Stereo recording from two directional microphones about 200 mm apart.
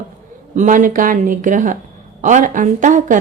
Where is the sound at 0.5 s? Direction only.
40° right (ahead or behind).